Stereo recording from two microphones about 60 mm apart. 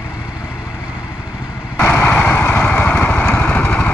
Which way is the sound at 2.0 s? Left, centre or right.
Left.